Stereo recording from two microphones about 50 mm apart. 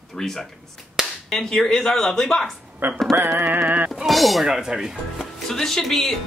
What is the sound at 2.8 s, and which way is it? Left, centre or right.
Music, right.